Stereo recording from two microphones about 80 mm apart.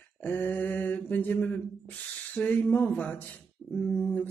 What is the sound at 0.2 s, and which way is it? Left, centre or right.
Mantra, left.